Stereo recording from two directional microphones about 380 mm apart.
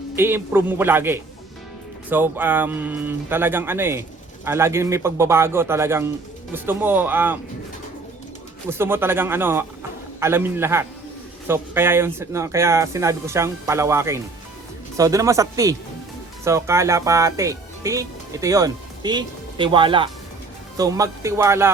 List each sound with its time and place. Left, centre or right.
0.2 s speech: centre
8.8 s speech: centre